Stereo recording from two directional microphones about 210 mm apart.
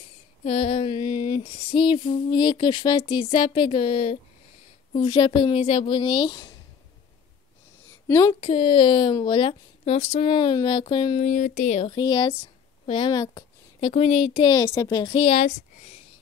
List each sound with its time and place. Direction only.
0.5 s a woman's voice: 30° left (ahead or behind)
8.1 s a woman's voice: 15° left (ahead or behind)
11.2 s a woman's voice: 35° left (ahead or behind)